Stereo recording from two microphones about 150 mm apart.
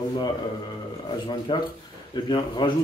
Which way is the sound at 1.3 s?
30° left (ahead or behind).